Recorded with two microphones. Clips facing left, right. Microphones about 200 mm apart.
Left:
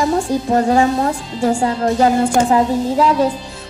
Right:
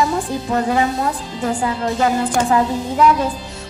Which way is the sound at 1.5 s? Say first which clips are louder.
Left 4 dB; 30° left (ahead or behind).